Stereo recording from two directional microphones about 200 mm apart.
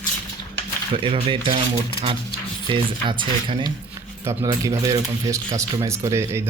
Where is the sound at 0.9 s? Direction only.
25° right (ahead or behind).